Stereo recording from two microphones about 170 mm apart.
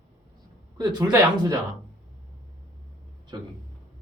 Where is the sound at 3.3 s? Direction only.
25° right (ahead or behind).